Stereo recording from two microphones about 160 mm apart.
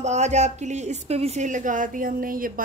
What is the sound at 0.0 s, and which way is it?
A woman's voice, 45° right (ahead or behind).